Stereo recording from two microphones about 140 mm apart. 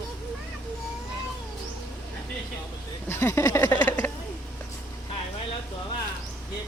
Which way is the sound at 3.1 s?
15° left (ahead or behind).